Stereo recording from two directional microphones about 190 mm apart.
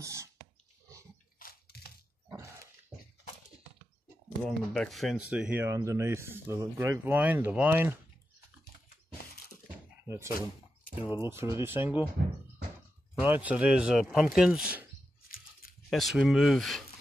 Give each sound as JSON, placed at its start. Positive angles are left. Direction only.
{"t": 0.0, "sound": "a sound", "side_deg": -15}
{"t": 1.4, "sound": "squish", "side_deg": 55}
{"t": 4.5, "sound": "speech", "side_deg": 0}
{"t": 10.0, "sound": "speech", "side_deg": -15}
{"t": 13.2, "sound": "speech", "side_deg": -10}
{"t": 15.2, "sound": "a sound", "side_deg": 50}
{"t": 15.9, "sound": "speech", "side_deg": 0}